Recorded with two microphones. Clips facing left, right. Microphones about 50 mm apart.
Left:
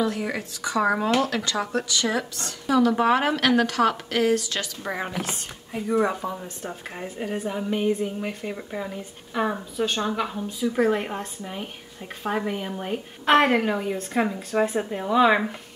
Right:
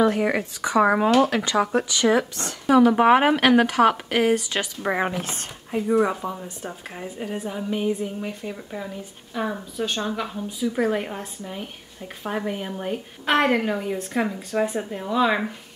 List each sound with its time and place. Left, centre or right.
0.0 s a woman's voice: right
6.2 s a woman's voice: centre
7.0 s a woman's voice: centre; by 9.6 s left
9.9 s a woman's voice: centre